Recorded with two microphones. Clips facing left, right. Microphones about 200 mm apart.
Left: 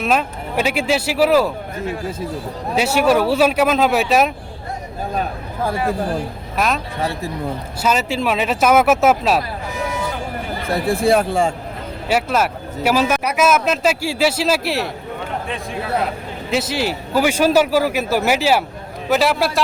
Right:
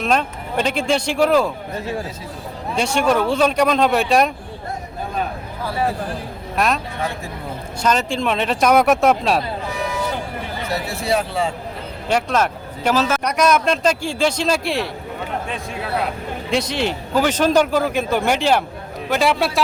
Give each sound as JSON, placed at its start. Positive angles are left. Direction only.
{"t": 0.0, "sound": "a man's voice", "side_deg": 5}
{"t": 2.7, "sound": "a man's voice", "side_deg": 5}
{"t": 6.6, "sound": "speech", "side_deg": 0}
{"t": 7.8, "sound": "speech", "side_deg": 5}
{"t": 10.7, "sound": "speech", "side_deg": 55}
{"t": 12.0, "sound": "a man's voice", "side_deg": 5}
{"t": 16.5, "sound": "a man's voice", "side_deg": 5}